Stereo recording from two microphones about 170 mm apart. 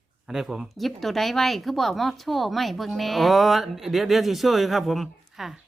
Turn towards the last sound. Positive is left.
turn(degrees=0)  # may be behind; listen again after turning